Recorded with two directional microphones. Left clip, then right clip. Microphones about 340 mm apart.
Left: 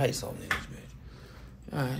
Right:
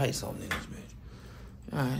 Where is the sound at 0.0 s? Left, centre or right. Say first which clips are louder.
Left 2 dB; centre.